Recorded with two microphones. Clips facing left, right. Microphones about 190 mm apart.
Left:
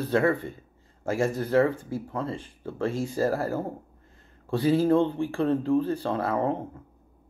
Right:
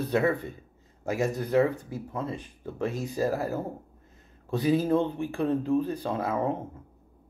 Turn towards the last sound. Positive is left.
turn(degrees=-10)  # may be behind; listen again after turning